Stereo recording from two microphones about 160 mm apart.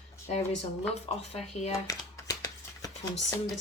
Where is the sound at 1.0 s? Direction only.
40° left (ahead or behind).